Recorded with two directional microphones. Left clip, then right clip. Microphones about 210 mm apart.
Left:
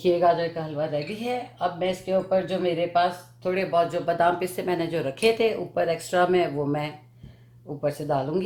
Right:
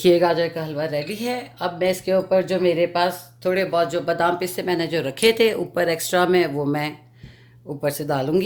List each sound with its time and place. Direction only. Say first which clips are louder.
0.0 s speech: right 4 dB; 45° right (ahead or behind)
3.5 s speech: right 3 dB; 30° right (ahead or behind)